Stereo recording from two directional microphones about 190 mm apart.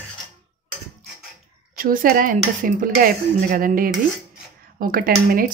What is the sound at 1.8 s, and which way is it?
Speech, 50° right (ahead or behind).